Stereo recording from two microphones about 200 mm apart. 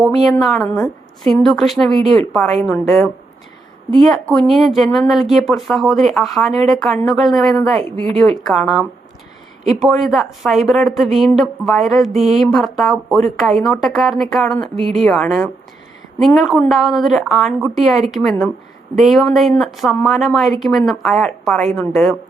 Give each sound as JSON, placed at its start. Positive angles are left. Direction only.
{"t": 0.0, "sound": "a woman's voice", "side_deg": 0}
{"t": 4.1, "sound": "a woman's voice", "side_deg": 5}